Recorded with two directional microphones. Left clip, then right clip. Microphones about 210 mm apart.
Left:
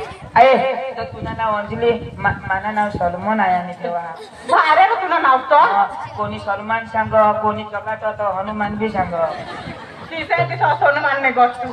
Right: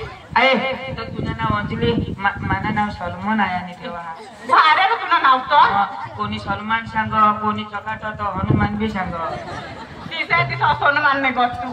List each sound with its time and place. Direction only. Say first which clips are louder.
0.3 s a man's voice: left 5 dB; 40° right (ahead or behind)
8.5 s a man's voice: left 2 dB; 40° right (ahead or behind)
10.1 s a man's voice: even; 40° right (ahead or behind)